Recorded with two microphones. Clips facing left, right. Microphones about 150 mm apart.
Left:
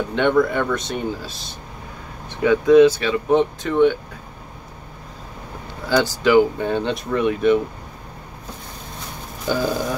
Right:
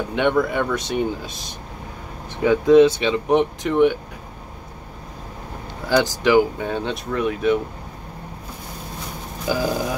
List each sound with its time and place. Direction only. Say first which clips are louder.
0.1 s speech: left 2 dB; 5° right (ahead or behind)
2.4 s speech: left 1 dB; 20° right (ahead or behind)
5.9 s speech: even; 15° right (ahead or behind)
6.6 s speech: left 3 dB; centre (ahead or behind)
9.5 s speech: left 1 dB; 5° right (ahead or behind)